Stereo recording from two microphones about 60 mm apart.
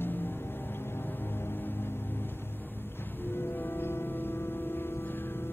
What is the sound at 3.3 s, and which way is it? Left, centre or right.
Music, left.